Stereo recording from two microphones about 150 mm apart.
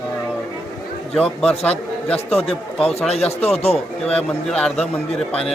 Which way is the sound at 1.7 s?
40° left (ahead or behind).